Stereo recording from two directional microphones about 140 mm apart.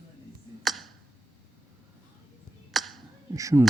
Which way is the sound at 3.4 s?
20° right (ahead or behind).